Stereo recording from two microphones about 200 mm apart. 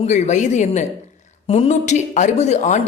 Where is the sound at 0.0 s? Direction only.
35° left (ahead or behind).